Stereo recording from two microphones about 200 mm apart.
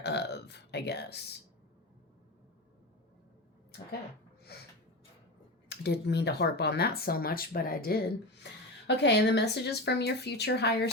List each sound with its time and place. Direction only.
0.0 s burping: 55° left (ahead or behind)
4.5 s snort: 50° left (ahead or behind)
5.6 s speech: 55° left (ahead or behind)